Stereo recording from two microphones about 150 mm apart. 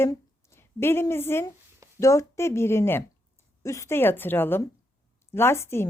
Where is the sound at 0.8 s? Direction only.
15° left (ahead or behind).